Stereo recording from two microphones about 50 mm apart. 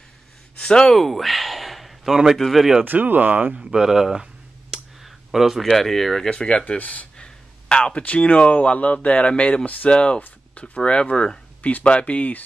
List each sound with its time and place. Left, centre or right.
0.6 s speech: centre
0.9 s a sound: centre
2.3 s speech: centre
2.8 s speech: right
3.5 s speech: centre
5.0 s a sound: centre
5.7 s speech: centre
6.3 s speech: centre
6.8 s speech: left
7.2 s a sound: centre
8.0 s speech: left
9.9 s speech: centre